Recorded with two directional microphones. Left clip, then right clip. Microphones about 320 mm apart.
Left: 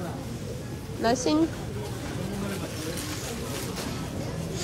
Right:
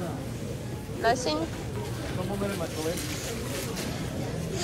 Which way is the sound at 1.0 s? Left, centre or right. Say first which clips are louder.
Left 1 dB; left.